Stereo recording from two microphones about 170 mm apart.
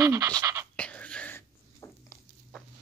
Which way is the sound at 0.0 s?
20° right (ahead or behind).